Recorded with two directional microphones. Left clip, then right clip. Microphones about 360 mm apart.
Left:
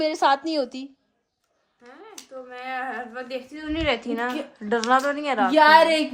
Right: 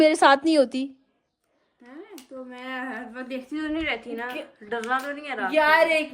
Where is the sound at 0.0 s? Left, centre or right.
Centre.